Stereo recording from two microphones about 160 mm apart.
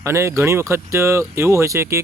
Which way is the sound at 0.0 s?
15° right (ahead or behind).